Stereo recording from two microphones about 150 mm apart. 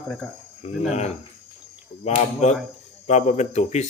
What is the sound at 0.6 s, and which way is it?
Speech, 50° left (ahead or behind).